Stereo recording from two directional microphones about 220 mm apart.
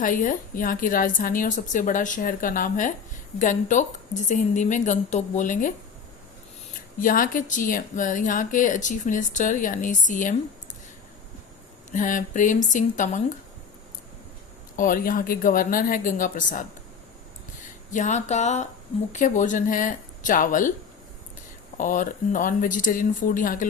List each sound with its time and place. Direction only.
0.0 s speech: 35° left (ahead or behind)
7.0 s speech: 40° left (ahead or behind)
11.9 s speech: 35° left (ahead or behind)
14.8 s speech: 40° left (ahead or behind)
17.9 s speech: 35° left (ahead or behind)
21.8 s speech: 35° left (ahead or behind)